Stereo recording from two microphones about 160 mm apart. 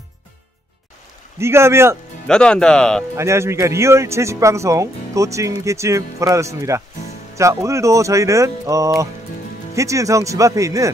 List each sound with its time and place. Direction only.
1.4 s speech: 15° right (ahead or behind)
2.2 s speech: 5° left (ahead or behind)
3.2 s a man's voice: 15° right (ahead or behind)